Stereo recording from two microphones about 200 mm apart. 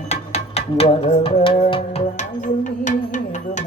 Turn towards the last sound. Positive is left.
turn(degrees=40)  # may be behind; listen again after turning